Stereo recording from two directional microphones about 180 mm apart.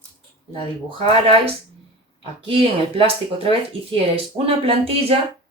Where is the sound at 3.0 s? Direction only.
30° right (ahead or behind).